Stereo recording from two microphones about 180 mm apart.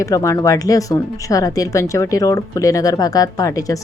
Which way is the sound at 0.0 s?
20° left (ahead or behind).